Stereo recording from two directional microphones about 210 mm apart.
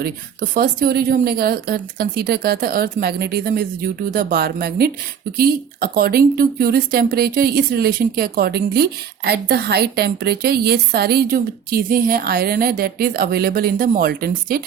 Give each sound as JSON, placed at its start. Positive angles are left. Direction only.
{"t": 0.0, "sound": "speech", "side_deg": -45}